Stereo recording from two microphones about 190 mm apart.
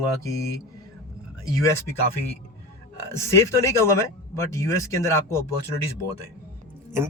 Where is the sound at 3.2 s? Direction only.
15° left (ahead or behind).